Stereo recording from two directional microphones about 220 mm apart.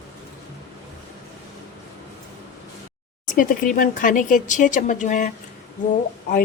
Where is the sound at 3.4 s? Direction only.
40° left (ahead or behind).